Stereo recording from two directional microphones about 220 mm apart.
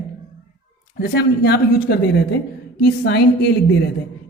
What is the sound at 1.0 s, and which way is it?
A man's voice, 45° left (ahead or behind).